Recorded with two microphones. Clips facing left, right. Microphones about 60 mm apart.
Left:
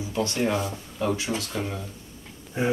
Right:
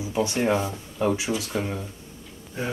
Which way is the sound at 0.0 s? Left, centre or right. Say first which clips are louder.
Right 2 dB; centre.